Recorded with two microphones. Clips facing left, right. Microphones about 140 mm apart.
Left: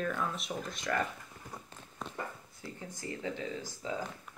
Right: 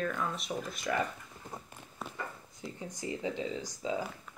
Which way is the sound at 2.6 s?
15° right (ahead or behind).